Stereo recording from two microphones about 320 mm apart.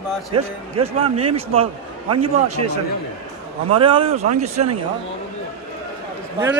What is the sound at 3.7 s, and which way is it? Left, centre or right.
Speech, centre.